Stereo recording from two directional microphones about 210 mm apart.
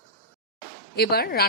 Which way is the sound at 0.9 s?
50° left (ahead or behind).